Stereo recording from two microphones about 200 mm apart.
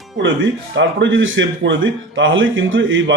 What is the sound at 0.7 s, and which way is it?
Speech, 65° right (ahead or behind).